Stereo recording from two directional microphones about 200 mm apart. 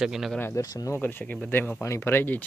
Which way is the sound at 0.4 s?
15° left (ahead or behind).